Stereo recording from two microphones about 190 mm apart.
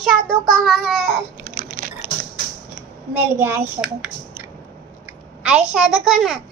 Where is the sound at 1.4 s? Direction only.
45° right (ahead or behind).